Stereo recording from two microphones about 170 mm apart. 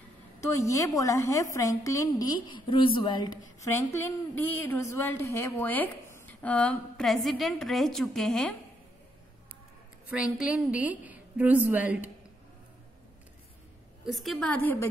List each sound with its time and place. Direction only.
0.4 s a woman's voice: 20° left (ahead or behind)
3.6 s a woman's voice: 15° left (ahead or behind)
10.0 s a woman's voice: 5° right (ahead or behind)
14.0 s a woman's voice: centre (ahead or behind)